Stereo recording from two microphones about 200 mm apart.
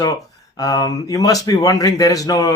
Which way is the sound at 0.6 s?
20° left (ahead or behind).